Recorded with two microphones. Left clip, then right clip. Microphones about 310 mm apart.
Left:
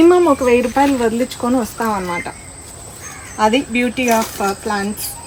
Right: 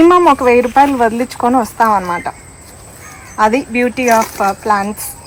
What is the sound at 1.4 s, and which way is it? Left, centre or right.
Speech, centre.